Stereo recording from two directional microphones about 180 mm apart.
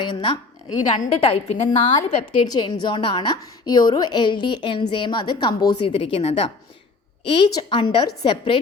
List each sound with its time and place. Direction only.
0.0 s a woman's voice: 25° left (ahead or behind)